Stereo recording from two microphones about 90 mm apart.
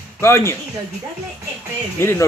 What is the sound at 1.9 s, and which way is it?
Speech, 25° left (ahead or behind).